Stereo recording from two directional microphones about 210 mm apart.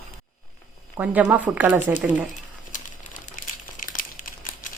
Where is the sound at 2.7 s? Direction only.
40° left (ahead or behind).